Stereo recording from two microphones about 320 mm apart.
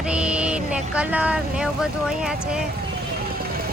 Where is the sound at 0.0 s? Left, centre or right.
Centre.